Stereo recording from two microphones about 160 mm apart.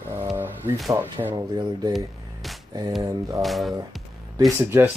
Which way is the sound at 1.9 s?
Centre (ahead or behind).